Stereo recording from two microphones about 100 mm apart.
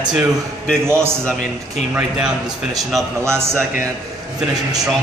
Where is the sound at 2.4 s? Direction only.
40° right (ahead or behind).